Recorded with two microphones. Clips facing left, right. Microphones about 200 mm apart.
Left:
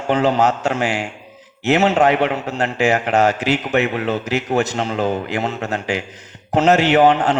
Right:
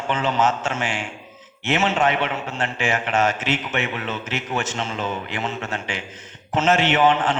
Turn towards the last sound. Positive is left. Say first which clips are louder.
# left 5 dB
turn(degrees=40)  # may be behind; listen again after turning